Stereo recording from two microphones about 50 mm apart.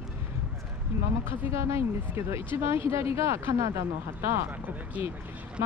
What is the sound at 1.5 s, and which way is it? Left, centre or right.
Speech, right.